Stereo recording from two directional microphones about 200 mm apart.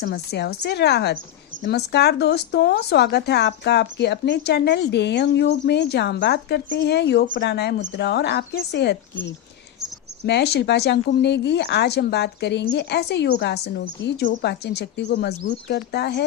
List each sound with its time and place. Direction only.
0.0 s speech: 50° left (ahead or behind)